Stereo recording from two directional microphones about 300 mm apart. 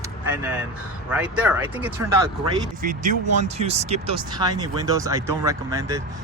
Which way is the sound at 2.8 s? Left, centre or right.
Right.